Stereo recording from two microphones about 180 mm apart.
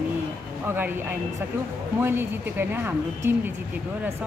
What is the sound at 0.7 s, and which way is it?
A woman's voice, 10° right (ahead or behind).